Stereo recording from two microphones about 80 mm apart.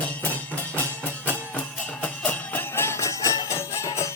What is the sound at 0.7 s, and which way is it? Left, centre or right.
Music, left.